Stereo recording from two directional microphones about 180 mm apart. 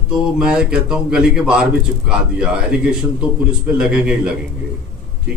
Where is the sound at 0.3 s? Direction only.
5° right (ahead or behind).